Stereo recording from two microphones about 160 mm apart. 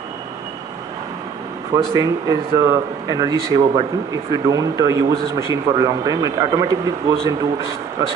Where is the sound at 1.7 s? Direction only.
20° right (ahead or behind).